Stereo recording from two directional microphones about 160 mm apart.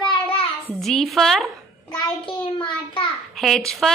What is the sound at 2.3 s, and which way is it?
Speech, 30° left (ahead or behind).